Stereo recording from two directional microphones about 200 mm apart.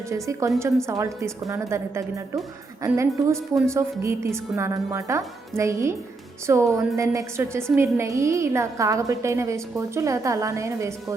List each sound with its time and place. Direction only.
0.1 s a woman's voice: 15° right (ahead or behind)